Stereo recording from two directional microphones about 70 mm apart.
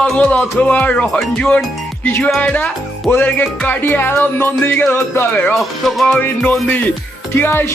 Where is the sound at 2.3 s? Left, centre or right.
Centre.